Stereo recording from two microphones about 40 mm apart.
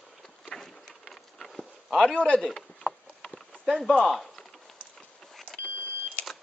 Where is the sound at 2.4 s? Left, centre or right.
Centre.